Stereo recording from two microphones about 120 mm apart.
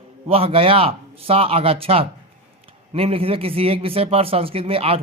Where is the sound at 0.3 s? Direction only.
50° right (ahead or behind).